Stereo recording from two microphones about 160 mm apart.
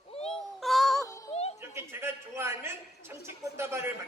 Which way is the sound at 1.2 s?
40° left (ahead or behind).